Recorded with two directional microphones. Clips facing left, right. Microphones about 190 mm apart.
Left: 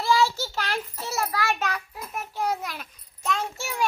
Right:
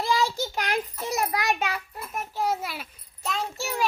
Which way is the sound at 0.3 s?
15° right (ahead or behind).